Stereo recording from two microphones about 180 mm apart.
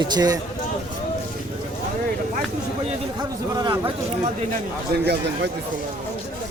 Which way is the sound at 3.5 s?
25° right (ahead or behind).